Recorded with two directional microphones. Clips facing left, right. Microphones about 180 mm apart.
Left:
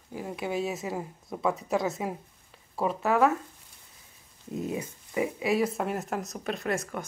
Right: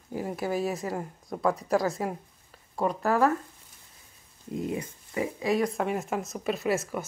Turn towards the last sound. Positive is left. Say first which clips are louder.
# right 3 dB
turn(degrees=-5)  # may be behind; listen again after turning